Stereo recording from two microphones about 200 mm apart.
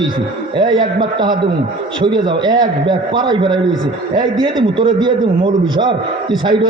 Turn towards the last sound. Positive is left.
turn(degrees=-20)  # may be behind; listen again after turning